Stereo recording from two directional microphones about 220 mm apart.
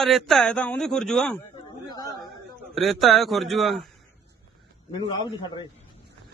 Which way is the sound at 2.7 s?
Centre (ahead or behind).